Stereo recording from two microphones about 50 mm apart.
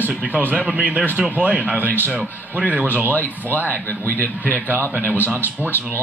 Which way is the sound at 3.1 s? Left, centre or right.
Left.